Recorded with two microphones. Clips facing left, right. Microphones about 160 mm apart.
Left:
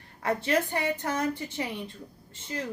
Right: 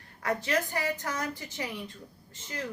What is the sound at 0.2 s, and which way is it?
Speech, 30° left (ahead or behind).